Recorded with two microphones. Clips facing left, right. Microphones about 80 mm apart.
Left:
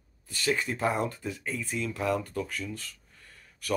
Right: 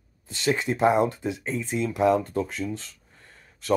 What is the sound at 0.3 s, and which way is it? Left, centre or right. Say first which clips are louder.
Speech: right 4 dB; right.